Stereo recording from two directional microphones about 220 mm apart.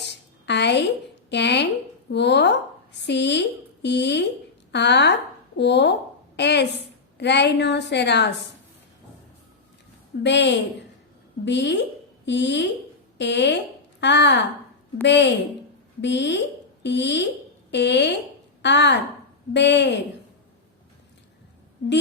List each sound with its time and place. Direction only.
0.0 s a sound: 50° left (ahead or behind)
1.3 s a woman's voice: 50° left (ahead or behind)
10.2 s a woman's voice: 55° left (ahead or behind)